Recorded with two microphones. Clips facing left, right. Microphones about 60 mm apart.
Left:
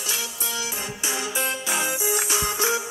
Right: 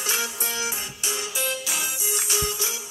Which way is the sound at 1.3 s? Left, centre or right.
Left.